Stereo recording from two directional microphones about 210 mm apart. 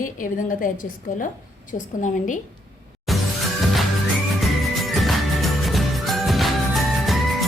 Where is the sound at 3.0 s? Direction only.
Centre (ahead or behind).